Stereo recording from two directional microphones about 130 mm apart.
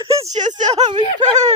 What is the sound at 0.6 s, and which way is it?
Speech, 60° right (ahead or behind).